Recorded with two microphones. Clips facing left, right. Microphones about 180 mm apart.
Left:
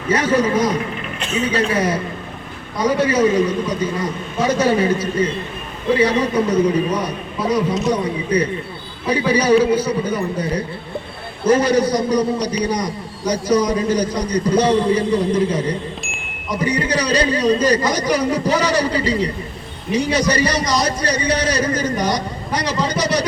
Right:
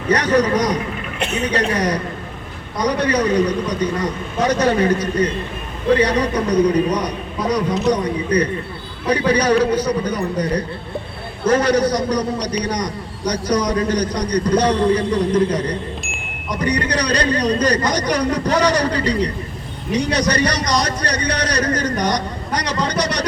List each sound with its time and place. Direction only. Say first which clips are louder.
0.1 s a man's voice: right 1 dB; 5° left (ahead or behind)
1.2 s a man's voice: even; 65° right (ahead or behind)
1.7 s a man's voice: left 1 dB; 5° left (ahead or behind)
6.3 s a man's voice: even; 5° left (ahead or behind)
8.0 s a man's voice: right 1 dB; 5° left (ahead or behind)